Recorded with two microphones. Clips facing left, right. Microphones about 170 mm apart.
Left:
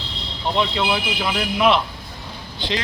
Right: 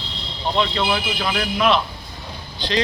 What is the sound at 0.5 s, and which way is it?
Speech, 10° left (ahead or behind).